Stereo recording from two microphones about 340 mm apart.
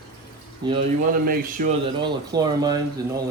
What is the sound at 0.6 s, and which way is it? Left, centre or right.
Speech, centre.